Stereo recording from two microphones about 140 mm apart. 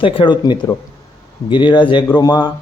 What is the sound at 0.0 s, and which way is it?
Speech, 35° left (ahead or behind).